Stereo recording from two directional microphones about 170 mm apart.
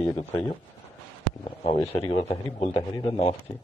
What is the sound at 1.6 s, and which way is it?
A man's voice, 40° left (ahead or behind).